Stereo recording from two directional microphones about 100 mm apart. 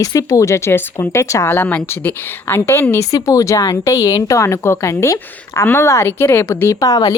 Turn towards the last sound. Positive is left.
turn(degrees=35)  # may be behind; listen again after turning